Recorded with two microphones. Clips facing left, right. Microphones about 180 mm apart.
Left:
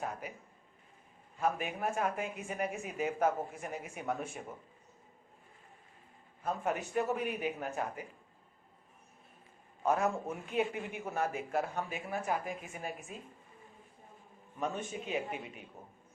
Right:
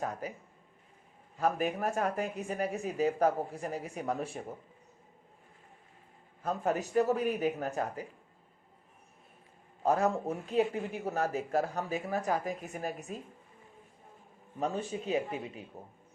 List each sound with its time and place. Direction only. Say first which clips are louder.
0.0 s speech: right 4 dB; 40° right (ahead or behind)
1.4 s speech: right 4 dB; 40° right (ahead or behind)
6.4 s speech: right 3 dB; 40° right (ahead or behind)
9.8 s speech: right 3 dB; 35° right (ahead or behind)
14.6 s speech: right 3 dB; 35° right (ahead or behind)